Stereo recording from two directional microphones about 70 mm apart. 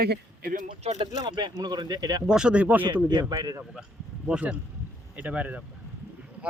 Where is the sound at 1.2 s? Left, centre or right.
Right.